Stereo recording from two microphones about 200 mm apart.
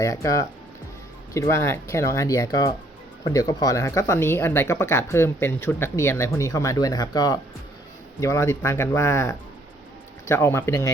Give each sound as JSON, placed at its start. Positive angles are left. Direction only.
{"t": 0.0, "sound": "speech", "side_deg": 15}